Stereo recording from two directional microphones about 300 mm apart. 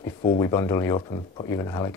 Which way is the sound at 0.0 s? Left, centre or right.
Centre.